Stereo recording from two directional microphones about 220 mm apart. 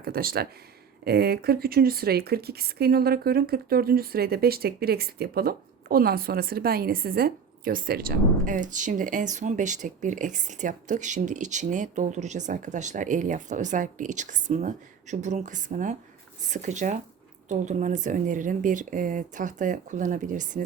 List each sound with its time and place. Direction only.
0.0 s speech: 45° right (ahead or behind)